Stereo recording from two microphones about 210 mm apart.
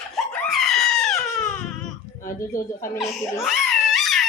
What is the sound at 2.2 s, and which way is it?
Music, 40° left (ahead or behind).